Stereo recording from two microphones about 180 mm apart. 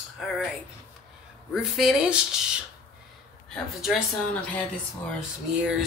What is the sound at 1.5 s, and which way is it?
Speech, centre (ahead or behind).